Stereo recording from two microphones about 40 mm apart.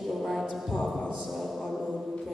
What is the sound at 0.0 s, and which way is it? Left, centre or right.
Music, centre.